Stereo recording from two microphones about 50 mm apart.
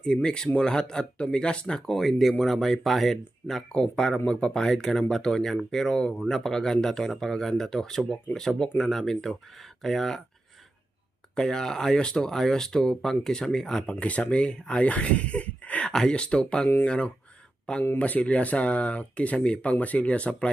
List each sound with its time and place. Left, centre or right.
0.0 s speech: centre
2.0 s speech: centre
11.3 s speech: centre
12.3 s speech: centre
14.0 s speech: left
15.9 s speech: centre